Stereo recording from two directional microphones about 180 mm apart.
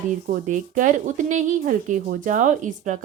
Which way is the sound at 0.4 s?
45° right (ahead or behind).